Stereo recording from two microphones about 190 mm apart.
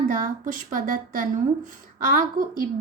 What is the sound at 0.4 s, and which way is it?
A woman's voice, 45° right (ahead or behind).